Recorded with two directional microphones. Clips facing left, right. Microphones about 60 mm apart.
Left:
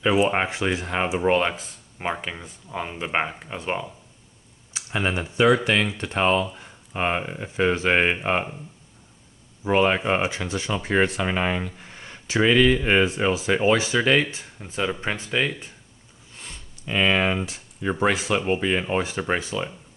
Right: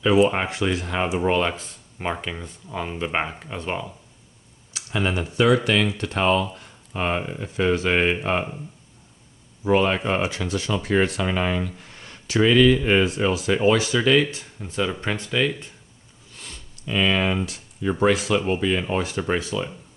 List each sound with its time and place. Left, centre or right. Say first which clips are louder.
0.3 s speech: even; centre
4.7 s speech: right 1 dB; left
9.7 s speech: even; left
16.3 s a sound: even; left
18.0 s speech: right 2 dB; left